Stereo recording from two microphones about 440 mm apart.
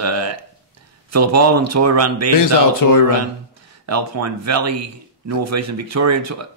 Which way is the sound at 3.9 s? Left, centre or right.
Right.